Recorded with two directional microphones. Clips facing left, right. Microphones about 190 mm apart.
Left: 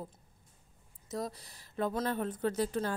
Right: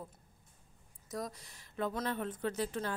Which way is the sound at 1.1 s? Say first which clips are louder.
Left 3 dB; 30° left (ahead or behind).